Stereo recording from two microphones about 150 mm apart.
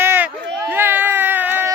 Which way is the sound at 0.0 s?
15° right (ahead or behind).